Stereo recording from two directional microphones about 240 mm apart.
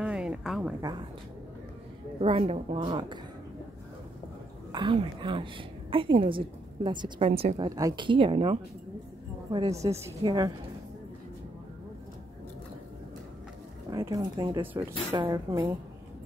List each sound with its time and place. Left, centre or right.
0.0 s a sound: centre
0.7 s a woman's voice: centre
2.1 s a woman's voice: right
4.7 s a woman's voice: centre
13.8 s a woman's voice: centre